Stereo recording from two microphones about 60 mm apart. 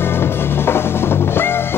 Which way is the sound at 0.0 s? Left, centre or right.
Left.